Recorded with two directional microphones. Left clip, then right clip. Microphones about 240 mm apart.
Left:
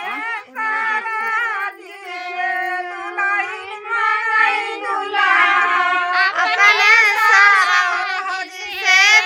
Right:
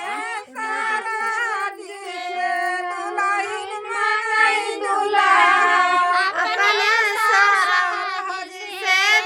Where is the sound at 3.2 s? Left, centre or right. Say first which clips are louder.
Left 3 dB; right.